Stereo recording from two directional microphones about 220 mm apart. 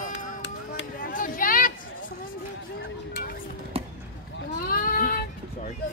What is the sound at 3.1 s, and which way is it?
Music, 40° left (ahead or behind).